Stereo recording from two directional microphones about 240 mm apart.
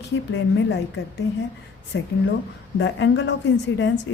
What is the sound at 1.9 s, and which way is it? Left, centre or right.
A woman's voice, left.